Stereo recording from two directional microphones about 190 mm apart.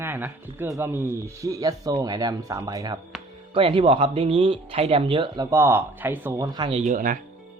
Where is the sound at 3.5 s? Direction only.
30° right (ahead or behind).